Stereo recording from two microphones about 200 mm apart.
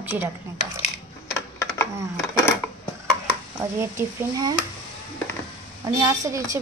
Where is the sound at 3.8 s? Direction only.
15° right (ahead or behind).